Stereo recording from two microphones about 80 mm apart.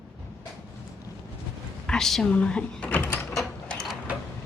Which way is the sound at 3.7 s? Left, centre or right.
Centre.